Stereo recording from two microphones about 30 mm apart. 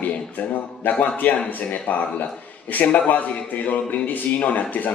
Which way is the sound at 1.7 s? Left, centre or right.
Left.